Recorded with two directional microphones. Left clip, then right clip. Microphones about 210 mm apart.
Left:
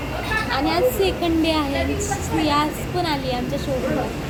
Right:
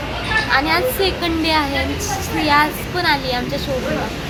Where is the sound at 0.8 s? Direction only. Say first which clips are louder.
Right 1 dB; centre (ahead or behind).